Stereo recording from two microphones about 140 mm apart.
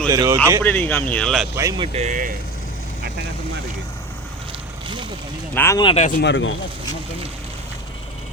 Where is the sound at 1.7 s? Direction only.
45° right (ahead or behind); by 2.3 s 65° right (ahead or behind).